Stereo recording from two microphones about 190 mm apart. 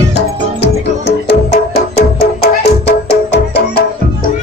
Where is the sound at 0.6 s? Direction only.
60° left (ahead or behind).